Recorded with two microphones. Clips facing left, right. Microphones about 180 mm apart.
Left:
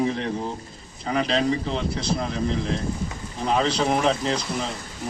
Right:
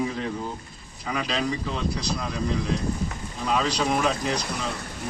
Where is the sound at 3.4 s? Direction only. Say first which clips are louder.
Left 3 dB; 30° left (ahead or behind).